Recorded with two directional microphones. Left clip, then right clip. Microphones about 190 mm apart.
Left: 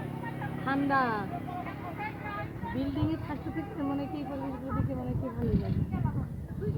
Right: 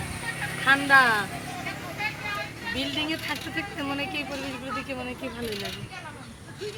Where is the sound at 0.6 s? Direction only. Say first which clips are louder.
Right 10 dB; 10° right (ahead or behind).